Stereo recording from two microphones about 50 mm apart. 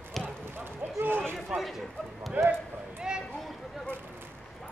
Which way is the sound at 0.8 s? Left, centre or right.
Right.